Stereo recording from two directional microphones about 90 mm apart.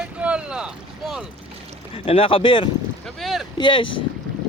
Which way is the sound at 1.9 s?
90° left.